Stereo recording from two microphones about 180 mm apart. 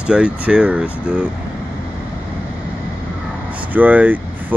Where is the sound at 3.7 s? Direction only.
10° right (ahead or behind).